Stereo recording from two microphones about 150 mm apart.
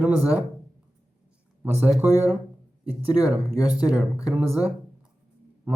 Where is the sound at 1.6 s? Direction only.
15° right (ahead or behind).